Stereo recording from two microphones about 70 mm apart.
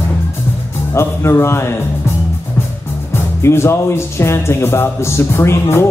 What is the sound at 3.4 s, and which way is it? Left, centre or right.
Speech, left.